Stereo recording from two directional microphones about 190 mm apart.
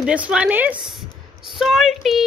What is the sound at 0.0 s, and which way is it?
A woman's voice, 5° right (ahead or behind).